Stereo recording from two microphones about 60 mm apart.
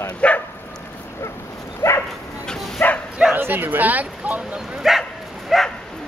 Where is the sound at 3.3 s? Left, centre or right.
Right.